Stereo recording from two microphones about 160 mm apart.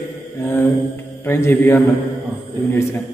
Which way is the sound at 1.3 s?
15° left (ahead or behind).